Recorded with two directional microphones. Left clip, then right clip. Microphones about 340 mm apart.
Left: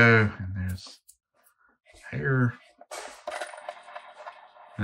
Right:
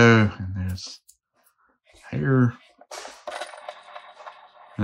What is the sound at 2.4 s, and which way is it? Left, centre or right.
Speech, centre.